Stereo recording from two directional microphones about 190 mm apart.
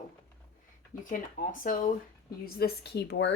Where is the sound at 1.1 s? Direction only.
45° left (ahead or behind).